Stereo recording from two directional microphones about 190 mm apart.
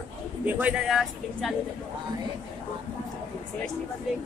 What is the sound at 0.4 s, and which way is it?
Speech, 5° right (ahead or behind).